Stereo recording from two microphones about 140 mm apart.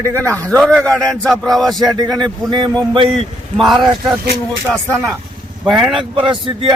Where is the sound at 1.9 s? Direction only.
25° right (ahead or behind).